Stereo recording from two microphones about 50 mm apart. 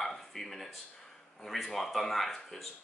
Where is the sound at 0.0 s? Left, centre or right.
Centre.